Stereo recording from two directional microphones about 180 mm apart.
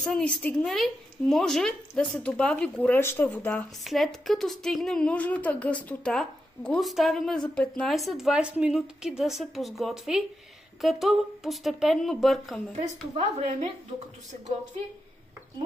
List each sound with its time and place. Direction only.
0.0 s a woman's voice: 5° left (ahead or behind)
3.8 s a woman's voice: centre (ahead or behind)
13.1 s a woman's voice: 40° right (ahead or behind)